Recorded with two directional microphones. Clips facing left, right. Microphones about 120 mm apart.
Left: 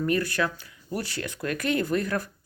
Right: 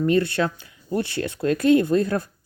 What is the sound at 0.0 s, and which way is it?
Speech, 25° right (ahead or behind).